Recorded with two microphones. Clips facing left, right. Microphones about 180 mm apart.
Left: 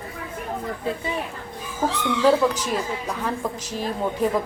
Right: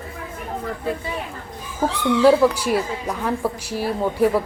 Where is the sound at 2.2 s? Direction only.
10° right (ahead or behind).